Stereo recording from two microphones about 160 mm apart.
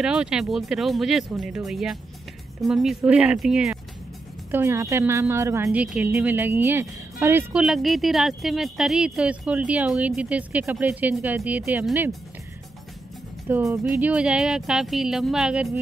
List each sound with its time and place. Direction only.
0.0 s speech: 5° right (ahead or behind)
4.5 s speech: 15° right (ahead or behind)
7.6 s speech: centre (ahead or behind)
13.5 s speech: 10° right (ahead or behind)